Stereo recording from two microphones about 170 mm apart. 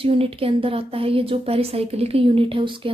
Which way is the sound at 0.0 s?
35° right (ahead or behind).